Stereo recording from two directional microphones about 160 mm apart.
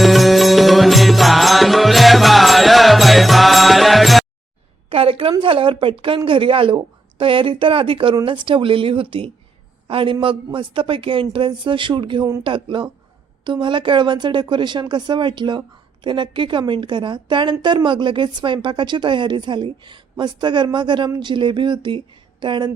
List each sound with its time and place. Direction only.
0.0 s music: centre (ahead or behind)
4.9 s a woman's voice: 35° right (ahead or behind)